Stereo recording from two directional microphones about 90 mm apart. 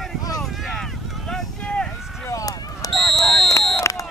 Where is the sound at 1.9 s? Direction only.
5° right (ahead or behind).